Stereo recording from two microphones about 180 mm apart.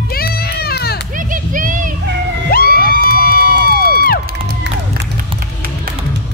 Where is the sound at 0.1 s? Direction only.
60° left (ahead or behind).